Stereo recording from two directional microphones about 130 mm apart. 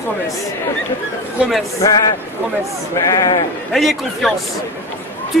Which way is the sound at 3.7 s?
Centre (ahead or behind).